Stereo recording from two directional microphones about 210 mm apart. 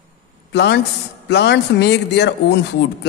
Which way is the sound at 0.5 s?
55° left (ahead or behind).